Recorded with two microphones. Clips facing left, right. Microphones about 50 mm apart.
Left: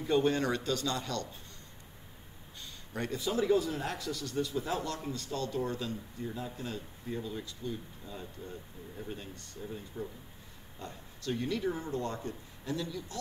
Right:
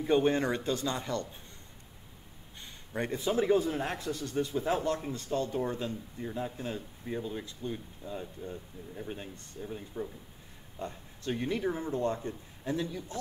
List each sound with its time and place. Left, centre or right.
0.0 s a man's voice: right
2.6 s a man's voice: right